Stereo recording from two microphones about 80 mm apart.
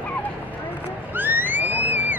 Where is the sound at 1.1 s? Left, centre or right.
Right.